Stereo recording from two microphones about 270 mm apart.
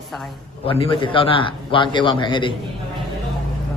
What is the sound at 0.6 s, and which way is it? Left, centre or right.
A man's voice, centre.